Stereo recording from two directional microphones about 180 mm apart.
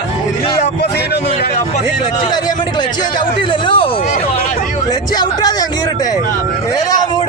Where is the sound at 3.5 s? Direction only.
25° left (ahead or behind).